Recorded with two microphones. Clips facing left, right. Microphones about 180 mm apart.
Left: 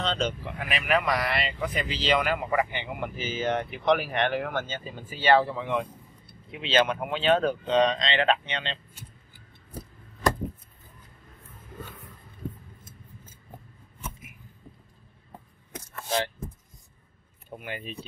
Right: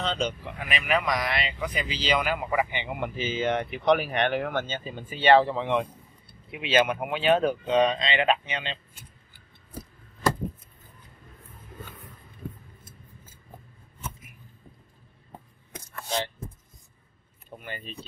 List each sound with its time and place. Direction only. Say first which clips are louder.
0.0 s speech: even; centre (ahead or behind); by 5.9 s 25° right (ahead or behind)
6.5 s speech: right 1 dB; 10° right (ahead or behind)
15.7 s a sound: left 2 dB; 5° left (ahead or behind)
17.5 s speech: left 3 dB; 5° left (ahead or behind)